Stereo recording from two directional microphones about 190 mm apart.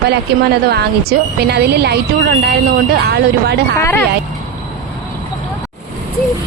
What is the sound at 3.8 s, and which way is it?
Child singing, 15° left (ahead or behind).